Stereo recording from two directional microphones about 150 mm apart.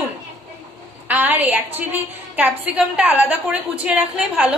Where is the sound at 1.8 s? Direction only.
10° right (ahead or behind).